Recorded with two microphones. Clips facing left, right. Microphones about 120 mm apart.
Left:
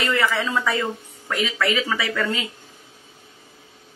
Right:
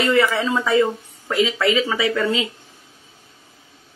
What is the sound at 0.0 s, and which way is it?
Speech, 20° right (ahead or behind).